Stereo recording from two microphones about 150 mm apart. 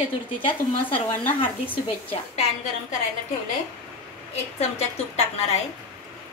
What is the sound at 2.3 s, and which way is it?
Speech, 50° left (ahead or behind).